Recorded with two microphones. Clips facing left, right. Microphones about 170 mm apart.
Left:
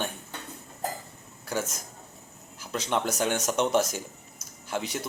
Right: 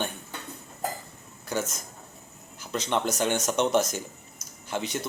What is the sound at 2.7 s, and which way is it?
A man's voice, 5° left (ahead or behind).